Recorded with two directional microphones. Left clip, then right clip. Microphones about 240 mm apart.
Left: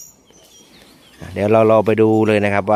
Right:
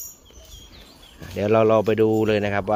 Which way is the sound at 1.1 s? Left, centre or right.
Left.